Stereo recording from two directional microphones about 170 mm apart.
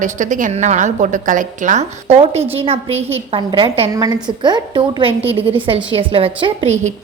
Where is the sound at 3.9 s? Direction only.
25° right (ahead or behind).